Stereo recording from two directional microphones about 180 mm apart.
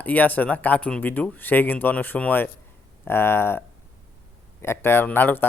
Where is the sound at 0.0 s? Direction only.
10° left (ahead or behind).